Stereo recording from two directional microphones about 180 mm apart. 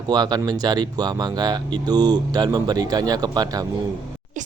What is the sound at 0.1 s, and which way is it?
Speech, 25° right (ahead or behind).